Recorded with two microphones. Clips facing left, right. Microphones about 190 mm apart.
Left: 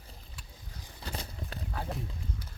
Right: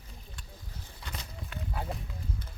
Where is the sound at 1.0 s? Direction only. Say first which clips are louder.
Left 4 dB; 35° left (ahead or behind).